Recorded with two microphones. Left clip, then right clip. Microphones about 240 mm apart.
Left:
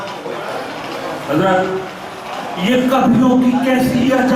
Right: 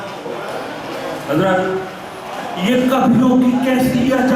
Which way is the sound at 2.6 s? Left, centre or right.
Centre.